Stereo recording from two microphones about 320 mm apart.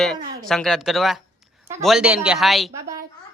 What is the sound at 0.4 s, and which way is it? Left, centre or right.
A man's voice, centre.